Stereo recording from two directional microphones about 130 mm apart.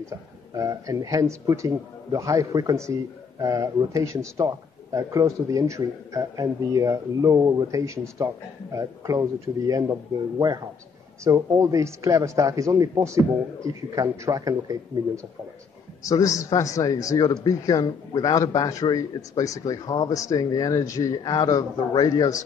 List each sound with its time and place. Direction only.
0.6 s a man's voice: 25° right (ahead or behind)
11.2 s a man's voice: 25° right (ahead or behind)
16.1 s a man's voice: 25° left (ahead or behind)